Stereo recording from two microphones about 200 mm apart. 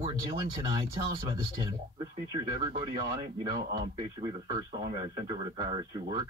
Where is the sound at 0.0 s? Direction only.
20° right (ahead or behind).